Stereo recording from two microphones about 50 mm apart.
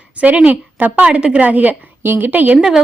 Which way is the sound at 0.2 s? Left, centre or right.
Right.